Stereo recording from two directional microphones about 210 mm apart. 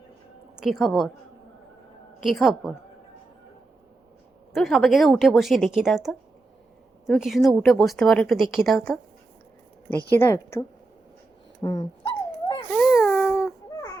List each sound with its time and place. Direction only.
0.5 s speech: centre (ahead or behind)
2.2 s speech: centre (ahead or behind)
4.5 s speech: centre (ahead or behind)
10.2 s speech: 10° left (ahead or behind)
11.6 s dog: 20° left (ahead or behind)
12.7 s a sound: centre (ahead or behind)